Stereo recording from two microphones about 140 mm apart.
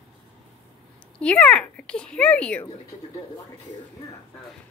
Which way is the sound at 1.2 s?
10° left (ahead or behind).